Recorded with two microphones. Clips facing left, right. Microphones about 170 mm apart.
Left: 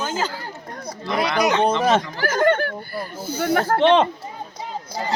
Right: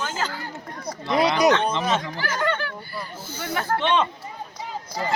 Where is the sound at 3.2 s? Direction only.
45° left (ahead or behind).